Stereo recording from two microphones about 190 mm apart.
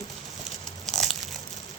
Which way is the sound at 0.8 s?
Centre (ahead or behind).